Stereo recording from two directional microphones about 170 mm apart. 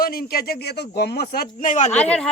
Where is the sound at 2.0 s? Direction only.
5° left (ahead or behind).